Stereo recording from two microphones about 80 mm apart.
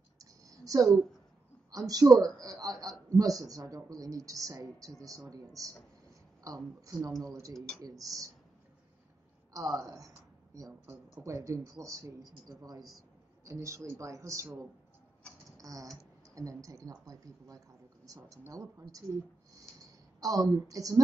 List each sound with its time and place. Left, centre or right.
0.2 s a sound: right
1.7 s a man's voice: right
9.5 s a woman's voice: right
13.5 s speech: right
15.5 s a sound: right
16.3 s a man's voice: right
20.2 s a man's voice: right